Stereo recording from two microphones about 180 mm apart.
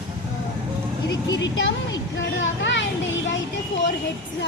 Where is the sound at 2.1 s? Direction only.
85° left.